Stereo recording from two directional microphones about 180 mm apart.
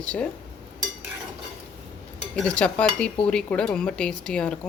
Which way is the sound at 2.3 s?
5° left (ahead or behind).